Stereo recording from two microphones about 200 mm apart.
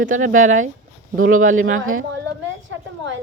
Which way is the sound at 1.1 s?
90° right.